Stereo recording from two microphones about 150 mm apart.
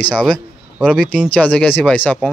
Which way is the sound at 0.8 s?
5° left (ahead or behind).